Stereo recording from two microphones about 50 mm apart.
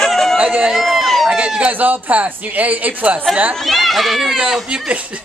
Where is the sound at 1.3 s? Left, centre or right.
Right.